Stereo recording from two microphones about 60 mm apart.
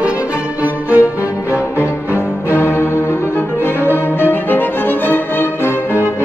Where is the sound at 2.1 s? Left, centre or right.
Left.